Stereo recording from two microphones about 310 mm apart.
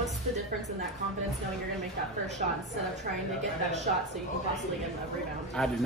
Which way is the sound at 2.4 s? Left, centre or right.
Right.